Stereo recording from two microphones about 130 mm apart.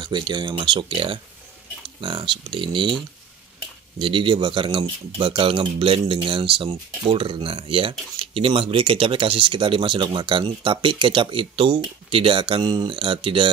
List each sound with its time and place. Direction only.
0.0 s speech: 35° right (ahead or behind)
4.0 s speech: 40° right (ahead or behind)